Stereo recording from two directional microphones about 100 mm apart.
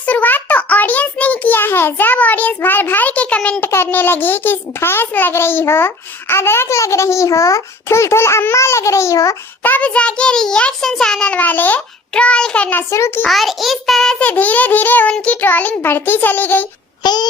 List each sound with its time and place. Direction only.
0.0 s a sound: 15° left (ahead or behind)
3.7 s a child's voice: 25° left (ahead or behind)
9.6 s a child's voice: 15° left (ahead or behind)
12.9 s a child's voice: 25° left (ahead or behind)
13.2 s a child's voice: centre (ahead or behind)
14.3 s a child's voice: 15° left (ahead or behind)
17.0 s a sound: 45° left (ahead or behind)